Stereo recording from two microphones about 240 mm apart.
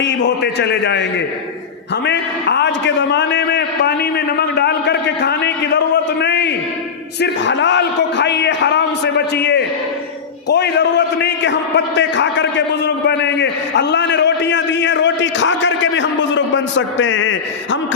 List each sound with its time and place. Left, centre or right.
0.0 s a man's voice: left
2.0 s a man's voice: left